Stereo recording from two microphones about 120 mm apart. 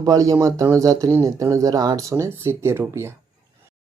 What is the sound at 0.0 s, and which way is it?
Speech, 30° right (ahead or behind).